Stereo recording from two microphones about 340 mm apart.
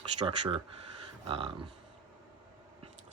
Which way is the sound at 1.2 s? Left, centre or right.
Centre.